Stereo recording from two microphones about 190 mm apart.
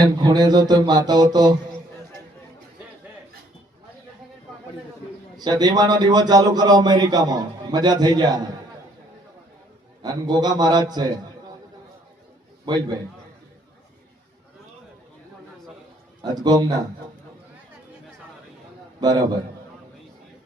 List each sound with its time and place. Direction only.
0.0 s a man's voice: 20° right (ahead or behind)
5.4 s a man's voice: 20° right (ahead or behind)
10.0 s a man's voice: 20° right (ahead or behind)
12.6 s a man's voice: 20° right (ahead or behind)
16.2 s a man's voice: 20° right (ahead or behind)
18.9 s a man's voice: 20° right (ahead or behind)